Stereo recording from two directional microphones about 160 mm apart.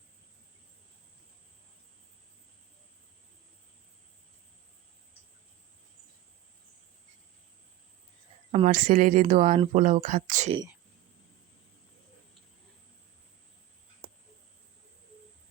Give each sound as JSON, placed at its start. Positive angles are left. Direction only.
{"t": 8.6, "sound": "a woman's voice", "side_deg": -55}